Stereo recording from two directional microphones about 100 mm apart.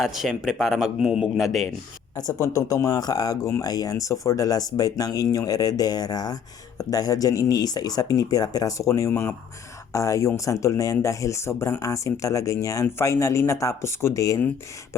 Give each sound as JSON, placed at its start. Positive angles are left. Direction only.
{"t": 0.0, "sound": "speech", "side_deg": 0}
{"t": 2.1, "sound": "speech", "side_deg": 35}